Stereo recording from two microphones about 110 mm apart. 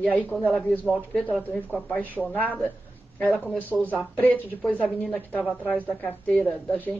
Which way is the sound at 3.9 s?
15° left (ahead or behind).